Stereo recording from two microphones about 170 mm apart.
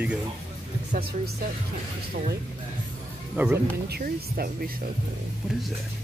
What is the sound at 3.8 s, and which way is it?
Speech, 65° right (ahead or behind).